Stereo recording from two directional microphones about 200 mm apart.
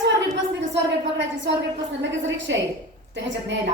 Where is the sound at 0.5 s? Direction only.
65° right (ahead or behind).